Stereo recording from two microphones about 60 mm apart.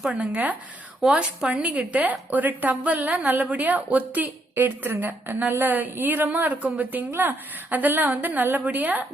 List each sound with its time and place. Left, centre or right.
0.1 s a woman's voice: right